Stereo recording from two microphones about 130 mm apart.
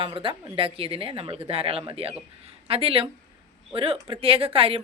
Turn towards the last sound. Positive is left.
turn(degrees=-45)  # may be behind; listen again after turning